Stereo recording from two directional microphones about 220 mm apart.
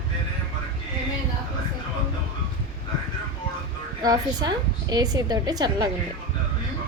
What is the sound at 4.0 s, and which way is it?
A woman's voice, 15° right (ahead or behind).